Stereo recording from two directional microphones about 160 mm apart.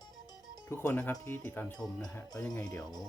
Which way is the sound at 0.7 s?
15° left (ahead or behind).